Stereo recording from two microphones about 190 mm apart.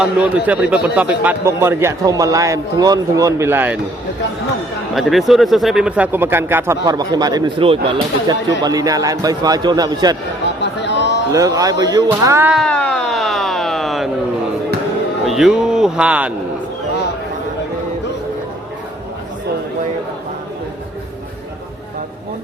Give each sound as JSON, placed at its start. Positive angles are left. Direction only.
{"t": 0.0, "sound": "a man's voice", "side_deg": -5}
{"t": 4.9, "sound": "a man's voice", "side_deg": 0}
{"t": 10.6, "sound": "a sound", "side_deg": 65}
{"t": 11.3, "sound": "a man's voice", "side_deg": -20}
{"t": 12.5, "sound": "a sound", "side_deg": 5}
{"t": 15.3, "sound": "speech", "side_deg": 0}